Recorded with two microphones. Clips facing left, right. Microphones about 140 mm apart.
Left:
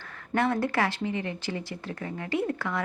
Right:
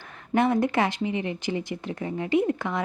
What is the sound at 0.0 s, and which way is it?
Speech, 20° right (ahead or behind).